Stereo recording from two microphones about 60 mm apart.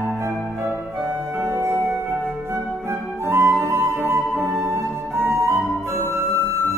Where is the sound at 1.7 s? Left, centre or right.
Right.